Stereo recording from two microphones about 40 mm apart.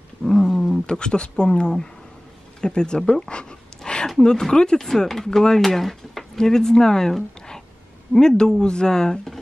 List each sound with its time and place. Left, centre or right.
0.2 s roaring cats: centre
0.8 s speech: left
3.2 s a sound: left
4.2 s speech: centre
4.7 s speech: centre